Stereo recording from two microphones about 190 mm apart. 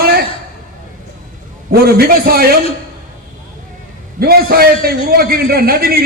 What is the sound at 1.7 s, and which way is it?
Speech, 50° right (ahead or behind).